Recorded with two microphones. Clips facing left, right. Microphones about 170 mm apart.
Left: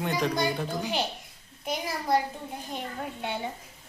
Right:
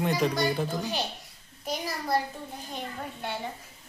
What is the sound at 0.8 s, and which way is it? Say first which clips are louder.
Speech: left 2 dB; 20° left (ahead or behind).